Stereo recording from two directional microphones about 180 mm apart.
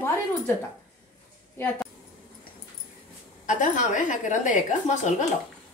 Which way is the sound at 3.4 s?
45° left (ahead or behind).